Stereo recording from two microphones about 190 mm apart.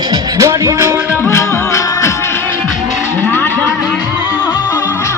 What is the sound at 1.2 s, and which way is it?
Music, 15° left (ahead or behind).